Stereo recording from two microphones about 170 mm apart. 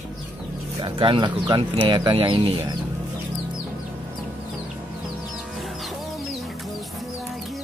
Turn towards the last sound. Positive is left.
turn(degrees=0)  # may be behind; listen again after turning